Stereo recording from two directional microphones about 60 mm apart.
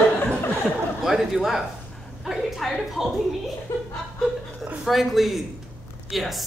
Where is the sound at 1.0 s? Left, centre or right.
Centre.